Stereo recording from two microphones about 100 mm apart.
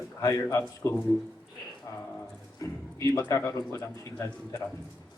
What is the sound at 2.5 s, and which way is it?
A man's voice, 35° left (ahead or behind).